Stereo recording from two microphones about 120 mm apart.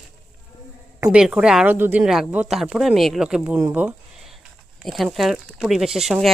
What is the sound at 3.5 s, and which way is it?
Speech, 15° right (ahead or behind).